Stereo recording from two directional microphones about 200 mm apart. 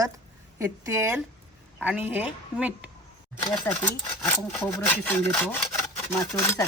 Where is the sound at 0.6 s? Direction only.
15° right (ahead or behind).